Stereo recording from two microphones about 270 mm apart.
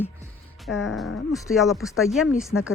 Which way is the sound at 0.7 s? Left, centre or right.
Left.